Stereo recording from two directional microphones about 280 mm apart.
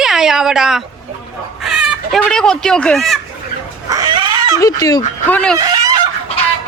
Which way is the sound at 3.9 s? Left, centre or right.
Centre.